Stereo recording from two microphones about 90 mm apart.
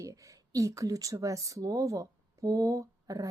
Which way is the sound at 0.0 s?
35° right (ahead or behind).